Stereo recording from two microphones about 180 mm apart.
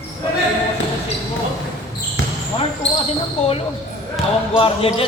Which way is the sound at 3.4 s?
30° left (ahead or behind).